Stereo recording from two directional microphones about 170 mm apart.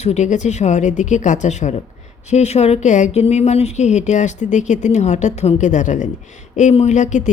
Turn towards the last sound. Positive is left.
turn(degrees=45)  # may be behind; listen again after turning